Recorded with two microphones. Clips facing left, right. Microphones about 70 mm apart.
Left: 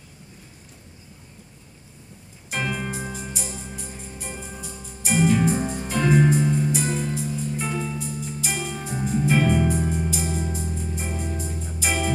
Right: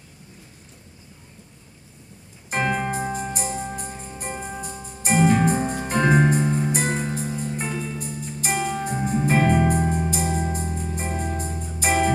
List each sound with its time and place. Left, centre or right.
2.5 s music: right
8.5 s music: centre
8.8 s music: right